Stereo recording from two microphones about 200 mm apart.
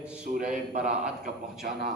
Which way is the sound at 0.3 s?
40° right (ahead or behind).